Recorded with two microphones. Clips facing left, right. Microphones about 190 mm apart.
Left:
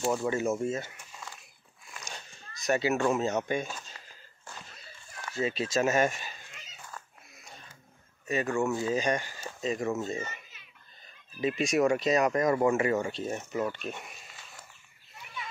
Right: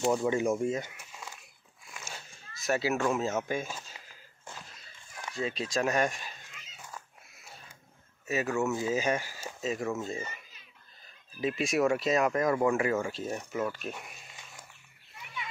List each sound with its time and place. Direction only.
0.2 s speech: 15° right (ahead or behind)
1.9 s a sound: 5° right (ahead or behind)
3.1 s speech: centre (ahead or behind)
5.3 s speech: centre (ahead or behind)
7.0 s cat: 10° right (ahead or behind)
7.4 s a sound: 5° right (ahead or behind)
8.3 s speech: 5° right (ahead or behind)
11.4 s speech: centre (ahead or behind)